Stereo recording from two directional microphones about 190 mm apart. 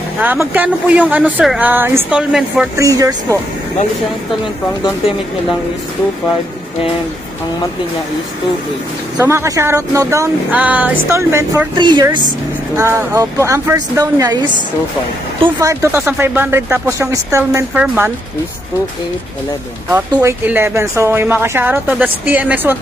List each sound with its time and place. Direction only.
0.2 s speech: 10° right (ahead or behind)
2.8 s speech: 20° right (ahead or behind)
9.2 s a woman's voice: 15° right (ahead or behind)
15.6 s speech: 15° right (ahead or behind)
19.9 s speech: 10° right (ahead or behind)